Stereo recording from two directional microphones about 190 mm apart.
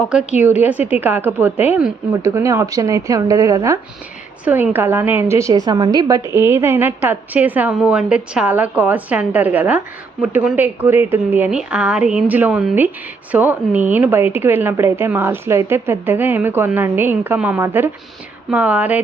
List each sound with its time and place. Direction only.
0.1 s a woman's voice: 5° right (ahead or behind)